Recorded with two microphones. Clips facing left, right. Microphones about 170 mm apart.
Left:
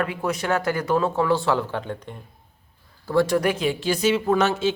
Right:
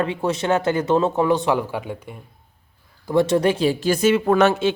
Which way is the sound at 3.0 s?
20° right (ahead or behind).